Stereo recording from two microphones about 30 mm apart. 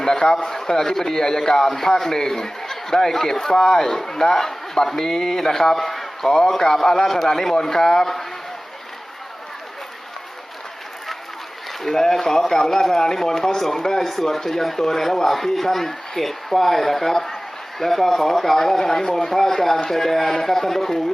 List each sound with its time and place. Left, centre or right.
0.0 s a man's voice: left
11.8 s a man's voice: centre